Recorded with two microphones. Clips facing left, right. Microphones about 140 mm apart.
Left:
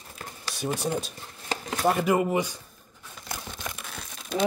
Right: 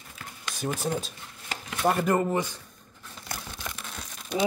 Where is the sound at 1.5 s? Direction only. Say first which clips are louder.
Left 2 dB; 35° left (ahead or behind).